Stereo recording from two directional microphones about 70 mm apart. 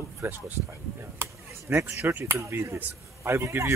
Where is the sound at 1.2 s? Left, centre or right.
Right.